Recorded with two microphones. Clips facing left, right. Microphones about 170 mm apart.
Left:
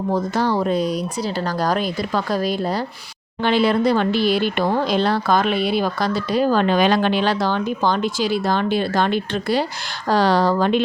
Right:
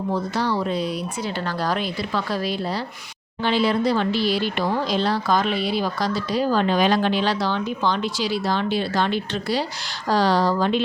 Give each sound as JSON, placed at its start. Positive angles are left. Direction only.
{"t": 0.1, "sound": "speech", "side_deg": 45}
{"t": 3.4, "sound": "speech", "side_deg": 60}